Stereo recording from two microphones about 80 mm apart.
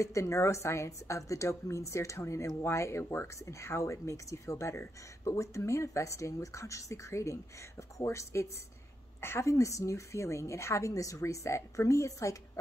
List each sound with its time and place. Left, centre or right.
0.0 s speech: left